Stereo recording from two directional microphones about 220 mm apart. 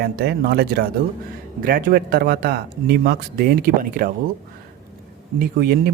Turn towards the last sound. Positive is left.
turn(degrees=-45)  # may be behind; listen again after turning